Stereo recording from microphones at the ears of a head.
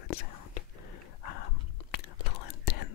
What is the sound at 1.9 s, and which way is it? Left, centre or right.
Whispering, left.